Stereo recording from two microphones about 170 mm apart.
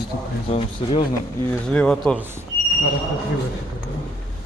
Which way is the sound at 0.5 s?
35° left (ahead or behind).